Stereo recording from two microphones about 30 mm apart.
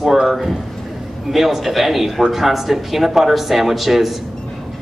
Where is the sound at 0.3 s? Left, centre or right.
Centre.